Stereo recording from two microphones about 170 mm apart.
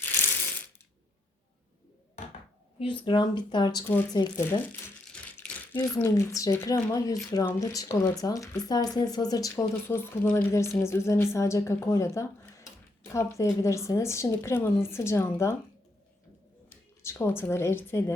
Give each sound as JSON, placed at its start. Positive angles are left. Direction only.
{"t": 0.0, "sound": "ratchet", "side_deg": 10}
{"t": 2.7, "sound": "speech", "side_deg": 30}
{"t": 5.1, "sound": "a sound", "side_deg": 5}
{"t": 5.9, "sound": "speech", "side_deg": 20}
{"t": 16.6, "sound": "speech", "side_deg": 15}